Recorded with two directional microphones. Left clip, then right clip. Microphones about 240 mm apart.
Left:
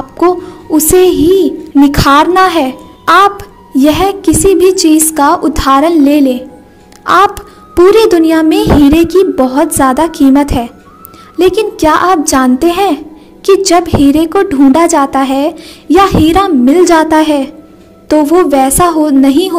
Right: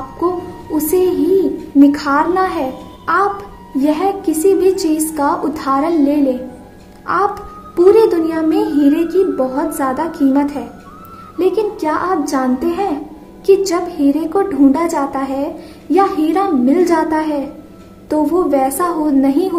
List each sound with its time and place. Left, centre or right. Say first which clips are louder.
0.7 s a woman's voice: left 8 dB; left